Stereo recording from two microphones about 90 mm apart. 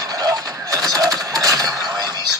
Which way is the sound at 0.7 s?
40° right (ahead or behind).